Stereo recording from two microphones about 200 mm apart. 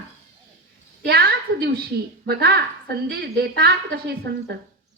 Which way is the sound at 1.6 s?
50° right (ahead or behind).